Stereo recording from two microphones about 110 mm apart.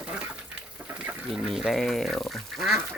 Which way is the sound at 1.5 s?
Centre (ahead or behind).